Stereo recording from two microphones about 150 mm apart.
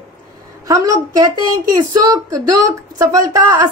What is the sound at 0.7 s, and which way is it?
A woman's voice, 20° right (ahead or behind).